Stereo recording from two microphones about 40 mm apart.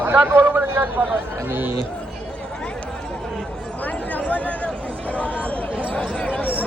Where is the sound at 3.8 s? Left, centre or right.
Left.